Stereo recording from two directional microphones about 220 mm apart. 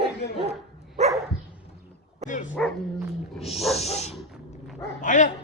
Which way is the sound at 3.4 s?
25° left (ahead or behind).